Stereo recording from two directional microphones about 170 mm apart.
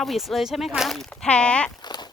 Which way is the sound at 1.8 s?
25° left (ahead or behind).